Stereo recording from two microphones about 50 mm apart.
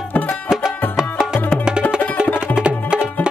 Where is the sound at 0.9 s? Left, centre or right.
Centre.